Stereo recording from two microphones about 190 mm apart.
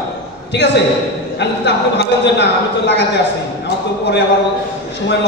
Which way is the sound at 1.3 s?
65° left (ahead or behind).